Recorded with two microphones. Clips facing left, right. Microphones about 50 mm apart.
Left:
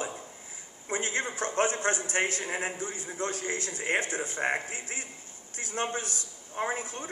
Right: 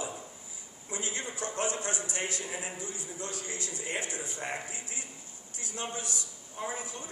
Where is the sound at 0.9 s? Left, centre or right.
Left.